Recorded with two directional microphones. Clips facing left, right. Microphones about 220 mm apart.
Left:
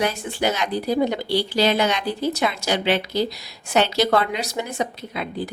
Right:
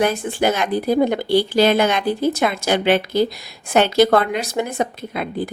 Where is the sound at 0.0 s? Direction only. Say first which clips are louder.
Right 5 dB; 50° right (ahead or behind).